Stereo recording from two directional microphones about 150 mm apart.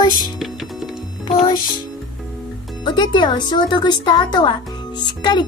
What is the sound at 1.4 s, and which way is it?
Speech, 25° left (ahead or behind).